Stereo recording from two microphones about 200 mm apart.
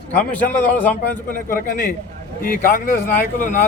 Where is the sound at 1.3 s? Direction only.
45° left (ahead or behind).